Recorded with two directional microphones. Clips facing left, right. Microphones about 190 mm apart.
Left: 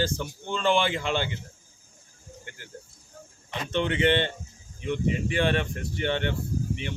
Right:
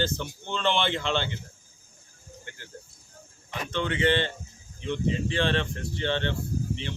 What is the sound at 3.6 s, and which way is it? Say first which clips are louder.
Speech: left 2 dB; 20° left (ahead or behind).